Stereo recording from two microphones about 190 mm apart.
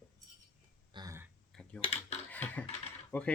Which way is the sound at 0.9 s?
20° right (ahead or behind).